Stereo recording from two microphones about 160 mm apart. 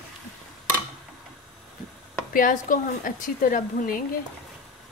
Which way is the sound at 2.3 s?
60° left (ahead or behind).